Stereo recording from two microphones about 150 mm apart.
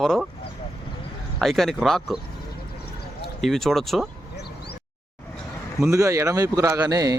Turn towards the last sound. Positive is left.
turn(degrees=-25)  # may be behind; listen again after turning